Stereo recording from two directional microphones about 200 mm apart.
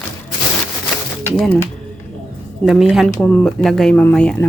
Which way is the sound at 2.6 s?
Centre (ahead or behind).